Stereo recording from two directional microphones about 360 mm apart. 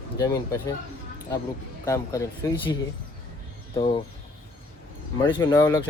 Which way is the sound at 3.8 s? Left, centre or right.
Centre.